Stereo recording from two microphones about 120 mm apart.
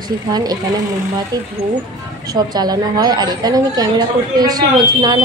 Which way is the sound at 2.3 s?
35° right (ahead or behind).